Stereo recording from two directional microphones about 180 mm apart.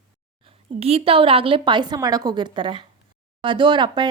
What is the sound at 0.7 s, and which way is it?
Speech, 35° right (ahead or behind).